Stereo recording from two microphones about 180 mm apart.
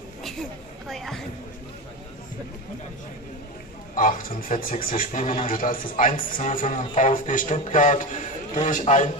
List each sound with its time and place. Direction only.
0.2 s a sound: centre (ahead or behind)
3.9 s a man's voice: 50° left (ahead or behind)
5.5 s a man's voice: 50° left (ahead or behind)